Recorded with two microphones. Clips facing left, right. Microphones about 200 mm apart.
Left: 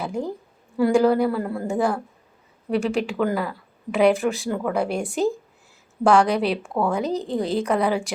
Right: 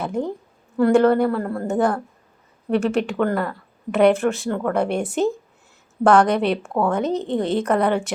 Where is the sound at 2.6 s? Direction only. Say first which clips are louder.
Right 3 dB; centre (ahead or behind).